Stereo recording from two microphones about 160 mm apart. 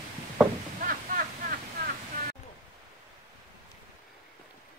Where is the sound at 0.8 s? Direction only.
60° right (ahead or behind).